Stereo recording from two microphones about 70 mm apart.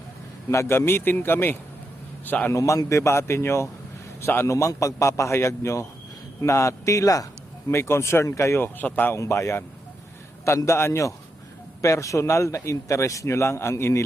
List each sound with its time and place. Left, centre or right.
0.5 s a man's voice: left
2.5 s a man's voice: left
4.5 s a man's voice: left
7.7 s speech: left
9.1 s a man's voice: left
10.7 s a man's voice: left